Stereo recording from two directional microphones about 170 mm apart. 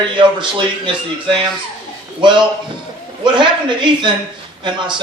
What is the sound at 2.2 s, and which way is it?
Speech, 25° right (ahead or behind).